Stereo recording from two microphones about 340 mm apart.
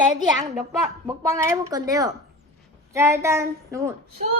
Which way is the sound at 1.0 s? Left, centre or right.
Centre.